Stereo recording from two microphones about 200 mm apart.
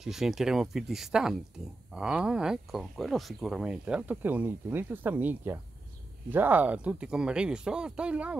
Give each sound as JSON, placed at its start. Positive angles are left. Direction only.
{"t": 0.0, "sound": "speech", "side_deg": 0}